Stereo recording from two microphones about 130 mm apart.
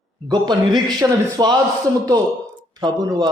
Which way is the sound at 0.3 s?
35° right (ahead or behind).